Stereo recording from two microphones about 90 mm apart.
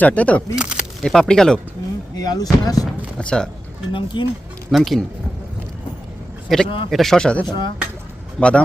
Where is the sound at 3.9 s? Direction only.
65° left (ahead or behind).